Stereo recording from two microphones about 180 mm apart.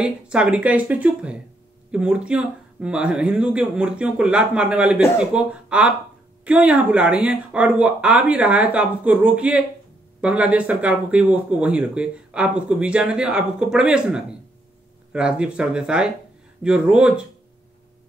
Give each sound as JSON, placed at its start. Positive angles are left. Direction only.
{"t": 0.0, "sound": "speech", "side_deg": -5}